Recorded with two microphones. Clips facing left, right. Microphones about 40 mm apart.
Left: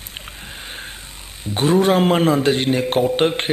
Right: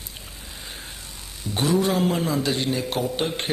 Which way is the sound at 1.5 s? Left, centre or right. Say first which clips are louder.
Left 6 dB; left.